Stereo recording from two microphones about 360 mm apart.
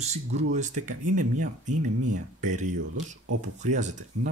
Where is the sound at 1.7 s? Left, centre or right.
Right.